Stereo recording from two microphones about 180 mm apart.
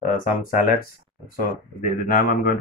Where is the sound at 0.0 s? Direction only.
50° left (ahead or behind).